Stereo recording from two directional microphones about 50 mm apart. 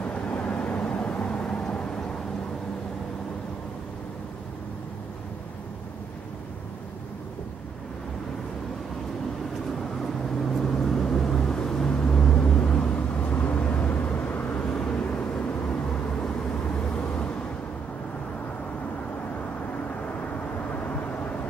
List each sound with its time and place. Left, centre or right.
0.0 s vehicle: left
10.4 s vehicle: centre
20.7 s vehicle: left